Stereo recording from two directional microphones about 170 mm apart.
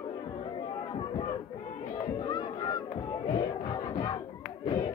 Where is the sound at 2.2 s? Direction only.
20° left (ahead or behind).